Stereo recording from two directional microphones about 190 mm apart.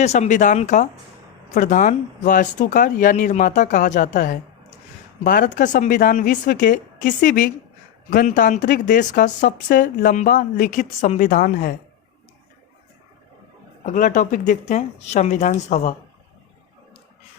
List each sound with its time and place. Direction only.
0.0 s speech: 35° left (ahead or behind)
13.8 s speech: 40° left (ahead or behind)